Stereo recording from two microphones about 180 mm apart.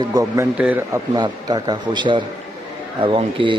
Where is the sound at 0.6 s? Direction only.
10° right (ahead or behind).